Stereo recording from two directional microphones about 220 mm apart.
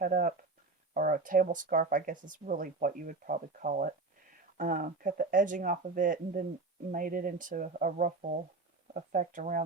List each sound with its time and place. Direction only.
0.0 s speech: 35° right (ahead or behind)